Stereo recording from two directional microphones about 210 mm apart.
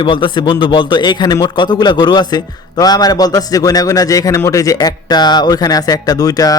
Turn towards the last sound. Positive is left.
turn(degrees=15)  # may be behind; listen again after turning